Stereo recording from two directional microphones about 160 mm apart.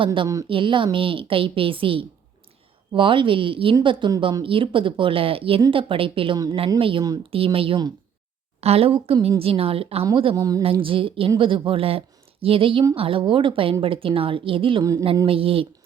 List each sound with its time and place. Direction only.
0.0 s speech: 30° right (ahead or behind)
10.3 s speech: 20° right (ahead or behind)
10.6 s a woman's voice: 35° right (ahead or behind)